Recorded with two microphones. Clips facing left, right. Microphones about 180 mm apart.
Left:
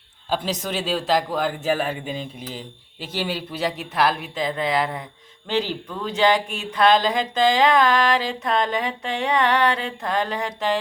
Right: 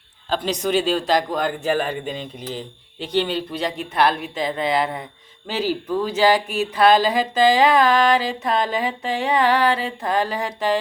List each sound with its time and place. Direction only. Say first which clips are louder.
0.4 s speech: right 6 dB; centre (ahead or behind)